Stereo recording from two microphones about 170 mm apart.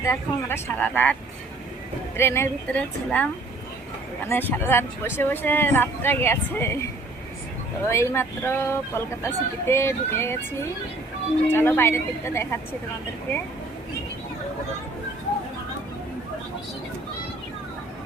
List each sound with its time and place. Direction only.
0.0 s speech: 15° left (ahead or behind)
2.1 s speech: 15° left (ahead or behind)
4.3 s speech: 10° left (ahead or behind)
7.9 s speech: 15° left (ahead or behind)